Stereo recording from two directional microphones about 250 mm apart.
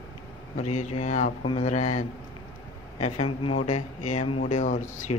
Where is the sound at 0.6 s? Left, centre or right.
Left.